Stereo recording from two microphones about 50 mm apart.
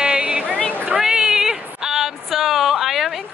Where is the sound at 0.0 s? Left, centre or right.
Right.